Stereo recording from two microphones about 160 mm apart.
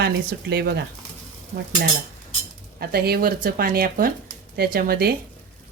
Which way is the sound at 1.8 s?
75° right (ahead or behind).